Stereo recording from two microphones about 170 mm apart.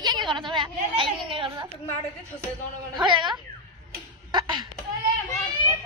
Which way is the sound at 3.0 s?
25° right (ahead or behind).